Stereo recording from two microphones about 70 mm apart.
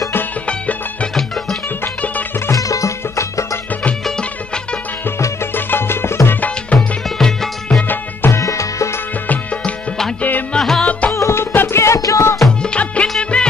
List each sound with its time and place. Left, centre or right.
2.5 s music: left
5.7 s music: left
6.7 s music: centre
7.2 s music: centre
8.3 s music: left
10.5 s music: centre
11.1 s music: left
12.6 s music: centre
13.2 s music of bollywood: centre